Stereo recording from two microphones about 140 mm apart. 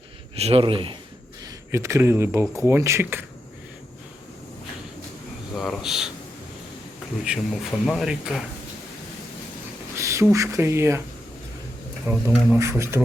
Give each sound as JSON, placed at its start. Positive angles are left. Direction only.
{"t": 0.3, "sound": "speech", "side_deg": -45}
{"t": 1.5, "sound": "speech", "side_deg": -20}
{"t": 5.5, "sound": "speech", "side_deg": 0}
{"t": 7.3, "sound": "speech", "side_deg": 0}
{"t": 9.9, "sound": "a sound", "side_deg": -20}
{"t": 10.3, "sound": "speech", "side_deg": -20}
{"t": 12.1, "sound": "speech", "side_deg": -15}